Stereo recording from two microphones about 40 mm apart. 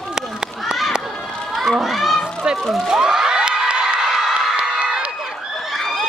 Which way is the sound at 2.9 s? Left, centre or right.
Centre.